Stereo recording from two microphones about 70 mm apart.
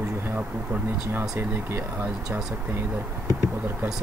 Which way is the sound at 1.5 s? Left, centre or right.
Right.